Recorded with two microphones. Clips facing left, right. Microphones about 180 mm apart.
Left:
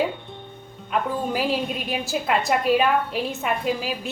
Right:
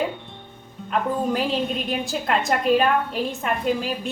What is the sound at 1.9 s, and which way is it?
A woman's voice, 5° left (ahead or behind).